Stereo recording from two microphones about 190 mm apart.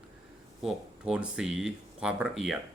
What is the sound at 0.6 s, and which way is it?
Speech, 5° right (ahead or behind).